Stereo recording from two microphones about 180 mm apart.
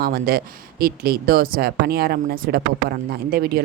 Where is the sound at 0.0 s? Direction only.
55° right (ahead or behind).